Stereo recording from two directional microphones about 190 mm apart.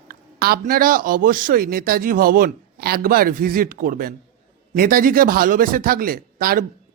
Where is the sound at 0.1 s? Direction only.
55° right (ahead or behind).